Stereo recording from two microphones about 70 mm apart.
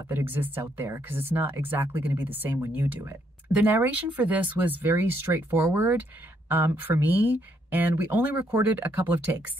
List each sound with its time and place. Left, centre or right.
0.1 s speech: right